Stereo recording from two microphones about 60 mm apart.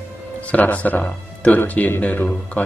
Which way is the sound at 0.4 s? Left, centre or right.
Left.